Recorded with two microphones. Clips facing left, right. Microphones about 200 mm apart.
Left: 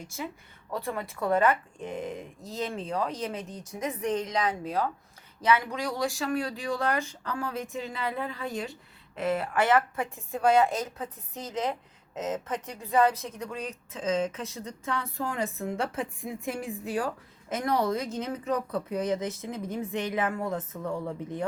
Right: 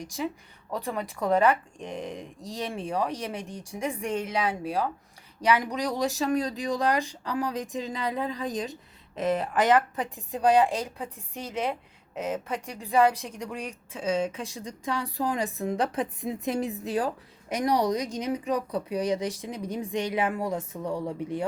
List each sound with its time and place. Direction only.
0.0 s a woman's voice: 15° right (ahead or behind)